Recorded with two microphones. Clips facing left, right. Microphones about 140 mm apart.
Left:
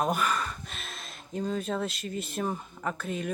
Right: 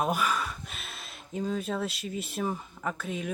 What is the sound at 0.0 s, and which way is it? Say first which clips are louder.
Speech: even; 5° right (ahead or behind).